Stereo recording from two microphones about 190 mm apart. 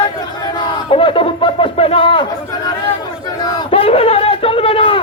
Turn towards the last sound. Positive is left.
turn(degrees=30)  # may be behind; listen again after turning